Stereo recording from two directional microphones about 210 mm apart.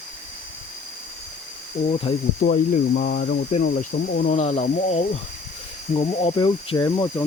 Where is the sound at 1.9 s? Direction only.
25° left (ahead or behind).